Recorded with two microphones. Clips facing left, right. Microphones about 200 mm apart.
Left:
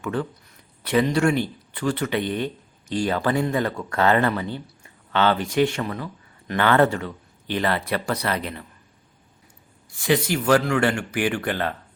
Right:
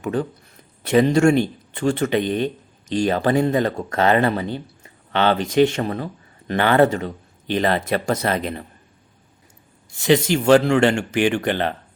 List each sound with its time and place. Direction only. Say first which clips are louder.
0.8 s speech: right 5 dB; 25° right (ahead or behind)
3.7 s speech: right 4 dB; 45° right (ahead or behind)
3.9 s speech: right 2 dB; 20° right (ahead or behind)
6.5 s speech: right 3 dB; 15° right (ahead or behind)
9.9 s speech: right 5 dB; 25° right (ahead or behind)